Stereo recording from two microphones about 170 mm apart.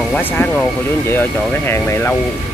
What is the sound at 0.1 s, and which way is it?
Speech, 10° left (ahead or behind).